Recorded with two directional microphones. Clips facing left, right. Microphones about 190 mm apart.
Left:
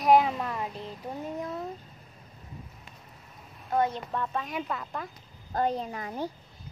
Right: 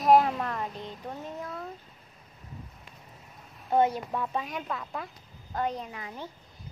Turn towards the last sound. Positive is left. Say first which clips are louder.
# left 6 dB
turn(degrees=45)  # may be behind; listen again after turning